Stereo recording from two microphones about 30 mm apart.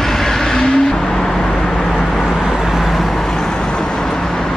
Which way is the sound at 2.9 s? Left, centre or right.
Centre.